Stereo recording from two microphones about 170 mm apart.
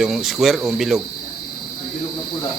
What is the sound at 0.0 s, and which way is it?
Speech, centre (ahead or behind).